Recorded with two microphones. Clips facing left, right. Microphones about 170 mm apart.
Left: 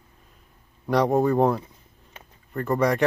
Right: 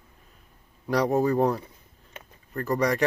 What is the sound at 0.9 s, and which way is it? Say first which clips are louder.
Speech: left 2 dB; centre (ahead or behind).